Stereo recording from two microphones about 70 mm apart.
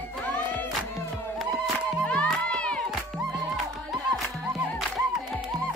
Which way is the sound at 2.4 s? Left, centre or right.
Centre.